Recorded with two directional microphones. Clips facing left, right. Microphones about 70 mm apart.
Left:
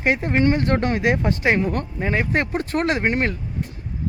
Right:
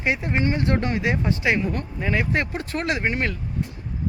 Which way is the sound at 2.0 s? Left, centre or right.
Left.